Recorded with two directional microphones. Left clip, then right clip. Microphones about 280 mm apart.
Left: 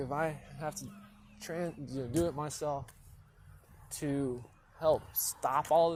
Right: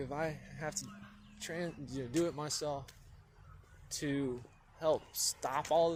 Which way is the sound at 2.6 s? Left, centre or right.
Centre.